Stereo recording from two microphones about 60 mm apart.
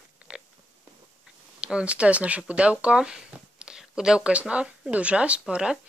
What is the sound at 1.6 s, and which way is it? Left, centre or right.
Speech, centre.